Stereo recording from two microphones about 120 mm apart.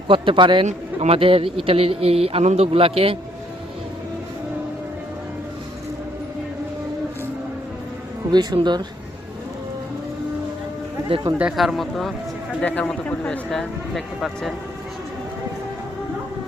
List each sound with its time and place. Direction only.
0.1 s a man's voice: 45° right (ahead or behind)
0.6 s a man's voice: 65° right (ahead or behind)
8.3 s speech: 35° right (ahead or behind)
11.3 s a man's voice: 5° right (ahead or behind)